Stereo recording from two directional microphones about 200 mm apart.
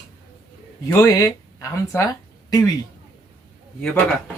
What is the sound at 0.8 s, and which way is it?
Speech, 15° left (ahead or behind).